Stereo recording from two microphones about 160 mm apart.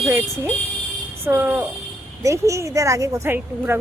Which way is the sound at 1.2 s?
15° right (ahead or behind).